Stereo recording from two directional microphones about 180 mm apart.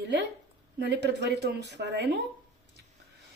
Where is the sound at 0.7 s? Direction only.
70° right (ahead or behind).